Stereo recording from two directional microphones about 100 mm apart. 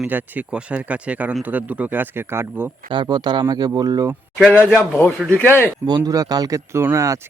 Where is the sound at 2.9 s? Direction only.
50° right (ahead or behind).